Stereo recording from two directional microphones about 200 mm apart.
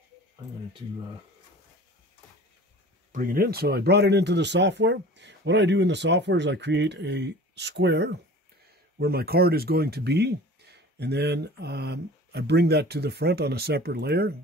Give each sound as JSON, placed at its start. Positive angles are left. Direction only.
{"t": 3.1, "sound": "speech", "side_deg": -45}